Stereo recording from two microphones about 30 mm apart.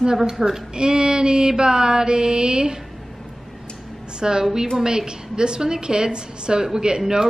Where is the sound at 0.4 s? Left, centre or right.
Centre.